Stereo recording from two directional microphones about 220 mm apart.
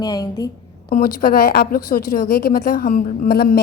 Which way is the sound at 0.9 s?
40° left (ahead or behind).